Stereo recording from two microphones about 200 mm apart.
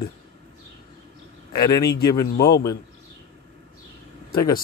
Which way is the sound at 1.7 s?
20° left (ahead or behind).